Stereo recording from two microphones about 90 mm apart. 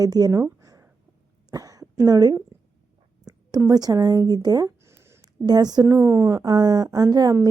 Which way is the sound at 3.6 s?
45° right (ahead or behind).